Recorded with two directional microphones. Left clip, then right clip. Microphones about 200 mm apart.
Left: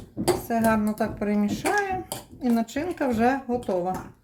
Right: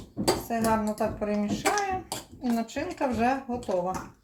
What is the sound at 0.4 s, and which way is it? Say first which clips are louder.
Speech: left 3 dB; 50° left (ahead or behind).